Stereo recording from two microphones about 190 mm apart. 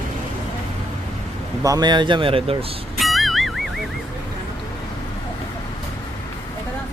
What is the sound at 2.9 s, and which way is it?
Music, centre (ahead or behind).